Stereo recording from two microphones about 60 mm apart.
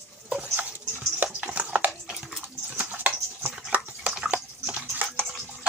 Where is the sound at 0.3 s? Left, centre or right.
Centre.